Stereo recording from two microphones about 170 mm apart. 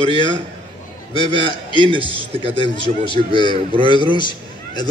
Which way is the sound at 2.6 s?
30° left (ahead or behind).